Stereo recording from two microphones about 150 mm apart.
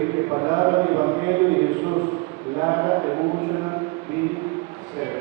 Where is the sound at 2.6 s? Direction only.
25° right (ahead or behind).